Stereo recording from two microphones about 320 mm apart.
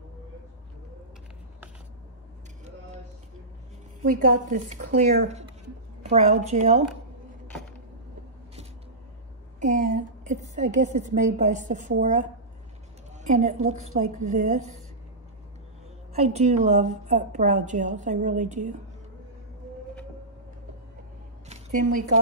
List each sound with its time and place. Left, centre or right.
4.0 s a woman's voice: right
9.6 s a sound: right
11.1 s a woman's voice: right
16.1 s a woman's voice: centre
21.5 s speech: right